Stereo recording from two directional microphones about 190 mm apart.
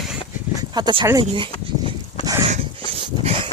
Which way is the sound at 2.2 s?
20° right (ahead or behind).